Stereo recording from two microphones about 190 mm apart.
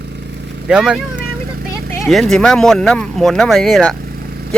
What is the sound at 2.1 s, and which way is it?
Speech, centre (ahead or behind).